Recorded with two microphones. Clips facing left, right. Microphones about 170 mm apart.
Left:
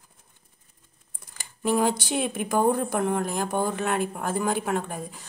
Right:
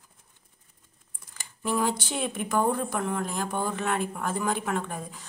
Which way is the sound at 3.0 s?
60° left (ahead or behind).